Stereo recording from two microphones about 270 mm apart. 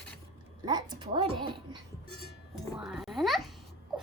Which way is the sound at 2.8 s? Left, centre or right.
Centre.